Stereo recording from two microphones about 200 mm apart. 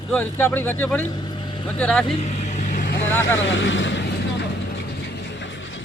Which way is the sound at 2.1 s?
35° left (ahead or behind).